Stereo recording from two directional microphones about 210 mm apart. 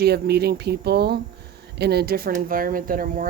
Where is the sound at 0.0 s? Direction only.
50° right (ahead or behind).